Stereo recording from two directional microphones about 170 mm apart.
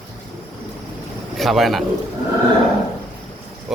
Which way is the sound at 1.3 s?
Centre (ahead or behind).